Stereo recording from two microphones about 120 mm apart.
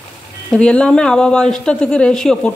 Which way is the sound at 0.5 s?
10° left (ahead or behind).